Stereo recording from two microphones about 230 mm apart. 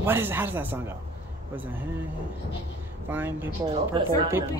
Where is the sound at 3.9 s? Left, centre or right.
Right.